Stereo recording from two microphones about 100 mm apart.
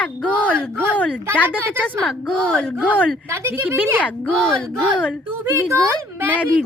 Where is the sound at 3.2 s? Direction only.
25° right (ahead or behind).